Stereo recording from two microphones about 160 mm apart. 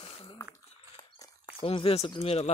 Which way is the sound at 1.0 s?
25° left (ahead or behind).